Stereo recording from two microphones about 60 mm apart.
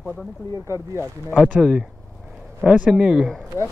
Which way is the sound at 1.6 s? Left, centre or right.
Centre.